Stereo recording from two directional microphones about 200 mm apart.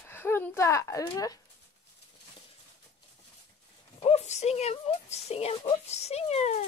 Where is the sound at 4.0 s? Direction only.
35° left (ahead or behind).